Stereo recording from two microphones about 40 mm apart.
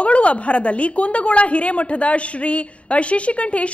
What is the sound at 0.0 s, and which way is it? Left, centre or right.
A woman's voice, left.